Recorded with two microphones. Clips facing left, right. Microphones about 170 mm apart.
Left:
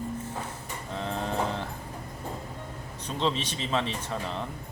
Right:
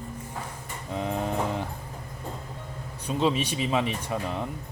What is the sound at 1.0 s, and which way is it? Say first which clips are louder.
Vehicle: right 2 dB; 15° right (ahead or behind).